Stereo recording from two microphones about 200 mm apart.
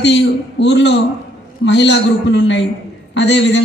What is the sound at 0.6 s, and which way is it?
A man's voice, 60° left (ahead or behind).